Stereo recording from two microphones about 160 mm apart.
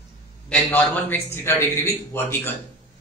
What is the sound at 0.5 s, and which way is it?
A man's voice, 10° left (ahead or behind).